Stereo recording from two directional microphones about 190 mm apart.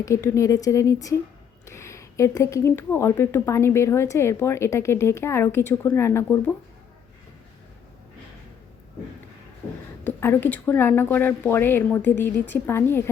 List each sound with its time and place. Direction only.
0.0 s speech: 15° left (ahead or behind)
10.0 s speech: 10° left (ahead or behind)